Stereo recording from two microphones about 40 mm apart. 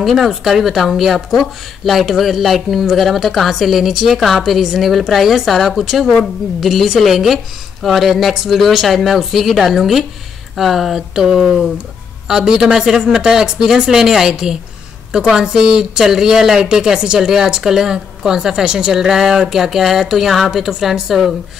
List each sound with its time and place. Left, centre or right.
0.0 s speech: centre
5.9 s a woman's voice: centre
11.0 s a woman's voice: centre